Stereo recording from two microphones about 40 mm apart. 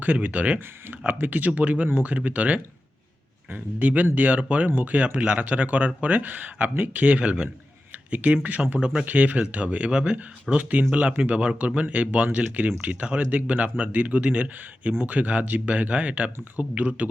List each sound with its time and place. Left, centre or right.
0.0 s speech: right
1.0 s speech: right
8.8 s speech: right
9.0 s speech: right
10.6 s speech: right
11.2 s speech: right